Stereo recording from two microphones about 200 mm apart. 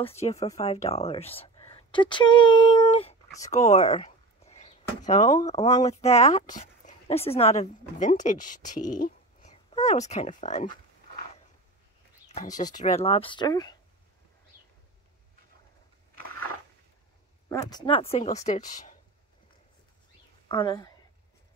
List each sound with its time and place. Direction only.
0.0 s speech: 30° left (ahead or behind)
3.4 s a sound: 35° left (ahead or behind)
5.9 s a woman's voice: 35° left (ahead or behind)
12.4 s speech: 40° left (ahead or behind); by 13.7 s 20° left (ahead or behind)
17.5 s speech: 15° left (ahead or behind); by 18.6 s 35° left (ahead or behind)
20.4 s speech: 25° left (ahead or behind)